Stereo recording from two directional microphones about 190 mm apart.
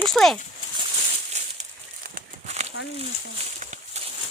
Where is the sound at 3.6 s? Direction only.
40° right (ahead or behind).